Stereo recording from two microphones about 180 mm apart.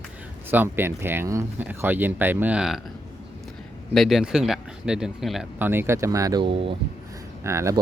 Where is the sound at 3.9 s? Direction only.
Centre (ahead or behind).